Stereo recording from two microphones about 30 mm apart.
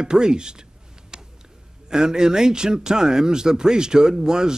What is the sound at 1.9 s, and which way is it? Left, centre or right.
Speech, right.